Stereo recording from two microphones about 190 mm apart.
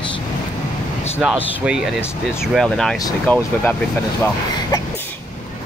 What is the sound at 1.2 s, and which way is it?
Speech, 5° right (ahead or behind).